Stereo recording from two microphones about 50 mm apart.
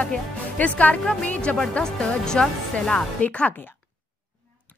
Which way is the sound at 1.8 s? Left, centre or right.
Centre.